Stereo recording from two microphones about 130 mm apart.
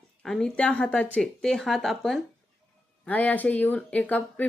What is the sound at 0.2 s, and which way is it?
Speech, 5° left (ahead or behind).